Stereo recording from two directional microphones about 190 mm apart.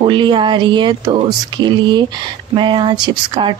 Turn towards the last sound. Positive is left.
turn(degrees=-25)  # may be behind; listen again after turning